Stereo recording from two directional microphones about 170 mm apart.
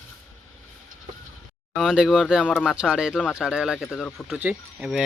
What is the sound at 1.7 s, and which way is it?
Speech, 5° right (ahead or behind).